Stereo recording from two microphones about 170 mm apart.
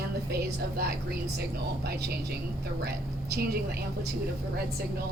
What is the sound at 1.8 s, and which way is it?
A woman's voice, 70° right (ahead or behind).